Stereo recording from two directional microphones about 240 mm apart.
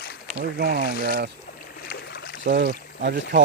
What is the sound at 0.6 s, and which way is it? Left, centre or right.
Speech, right.